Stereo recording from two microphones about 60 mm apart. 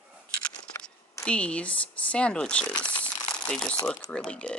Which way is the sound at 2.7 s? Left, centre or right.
Centre.